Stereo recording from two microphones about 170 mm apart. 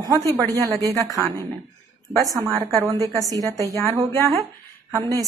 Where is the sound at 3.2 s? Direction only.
20° right (ahead or behind).